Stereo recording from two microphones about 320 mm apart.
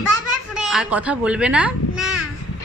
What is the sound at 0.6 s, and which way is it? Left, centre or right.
A child's voice, centre.